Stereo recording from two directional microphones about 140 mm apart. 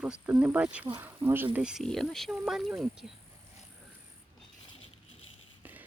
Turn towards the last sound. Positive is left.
turn(degrees=-10)  # may be behind; listen again after turning